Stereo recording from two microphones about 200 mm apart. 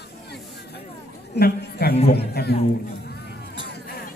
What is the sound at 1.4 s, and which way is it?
A man's voice, 50° left (ahead or behind).